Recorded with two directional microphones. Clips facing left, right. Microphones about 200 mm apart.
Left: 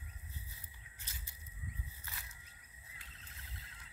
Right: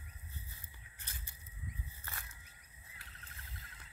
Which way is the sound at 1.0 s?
55° right (ahead or behind).